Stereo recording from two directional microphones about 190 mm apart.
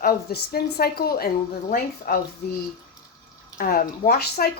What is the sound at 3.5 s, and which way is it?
Speech, 50° left (ahead or behind).